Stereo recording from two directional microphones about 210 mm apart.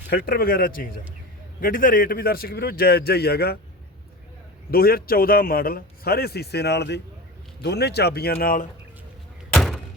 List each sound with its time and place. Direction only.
0.1 s a man's voice: 45° left (ahead or behind)
4.7 s a man's voice: 45° left (ahead or behind)
9.5 s thunk: centre (ahead or behind)